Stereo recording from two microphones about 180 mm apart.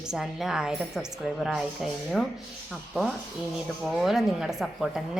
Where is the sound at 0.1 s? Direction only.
5° right (ahead or behind).